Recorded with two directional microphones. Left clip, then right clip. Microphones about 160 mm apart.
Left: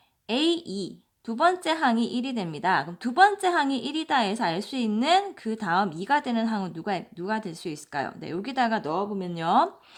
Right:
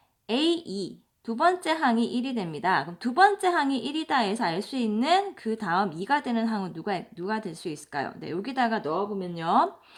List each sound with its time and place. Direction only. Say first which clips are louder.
0.3 s a woman's voice: left 1 dB; 25° left (ahead or behind)
8.8 s speech: even; 40° left (ahead or behind)